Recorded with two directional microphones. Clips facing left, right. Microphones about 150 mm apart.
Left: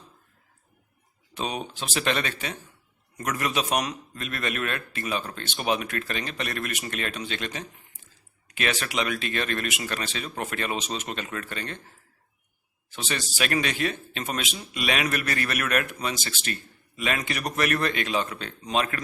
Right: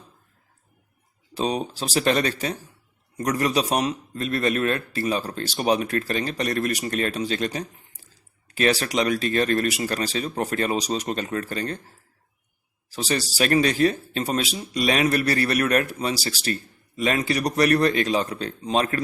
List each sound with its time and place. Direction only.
1.3 s a man's voice: 35° right (ahead or behind)